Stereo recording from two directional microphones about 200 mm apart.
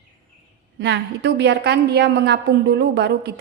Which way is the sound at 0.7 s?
60° right (ahead or behind).